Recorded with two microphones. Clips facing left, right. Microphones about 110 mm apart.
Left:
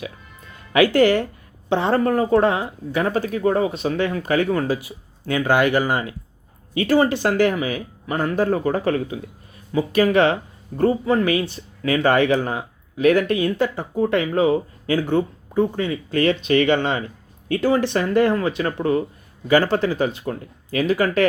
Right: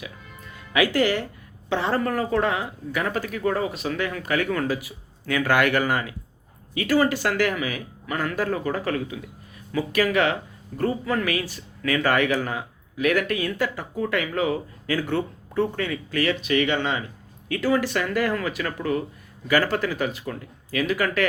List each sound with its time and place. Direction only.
0.7 s speech: 30° left (ahead or behind)
17.5 s speech: 25° left (ahead or behind)